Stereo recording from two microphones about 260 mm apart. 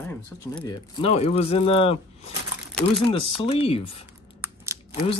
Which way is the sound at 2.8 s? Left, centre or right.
Centre.